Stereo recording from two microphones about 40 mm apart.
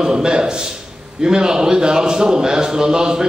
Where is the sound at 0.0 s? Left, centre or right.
Right.